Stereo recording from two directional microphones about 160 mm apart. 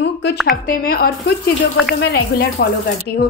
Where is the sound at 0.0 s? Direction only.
90° left.